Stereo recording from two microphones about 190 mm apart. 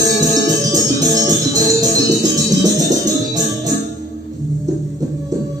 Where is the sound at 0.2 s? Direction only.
15° right (ahead or behind).